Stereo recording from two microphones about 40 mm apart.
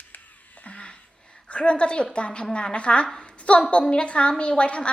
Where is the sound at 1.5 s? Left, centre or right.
Left.